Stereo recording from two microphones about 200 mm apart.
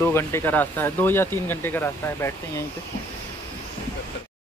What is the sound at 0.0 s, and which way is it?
Speech, 15° left (ahead or behind).